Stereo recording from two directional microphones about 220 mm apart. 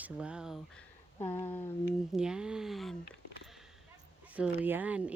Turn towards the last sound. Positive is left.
turn(degrees=-5)  # may be behind; listen again after turning